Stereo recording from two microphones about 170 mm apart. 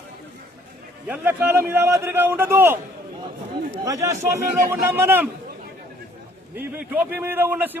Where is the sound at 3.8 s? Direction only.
20° right (ahead or behind).